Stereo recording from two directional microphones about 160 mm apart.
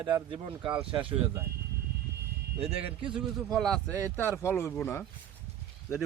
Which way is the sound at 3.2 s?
Centre (ahead or behind).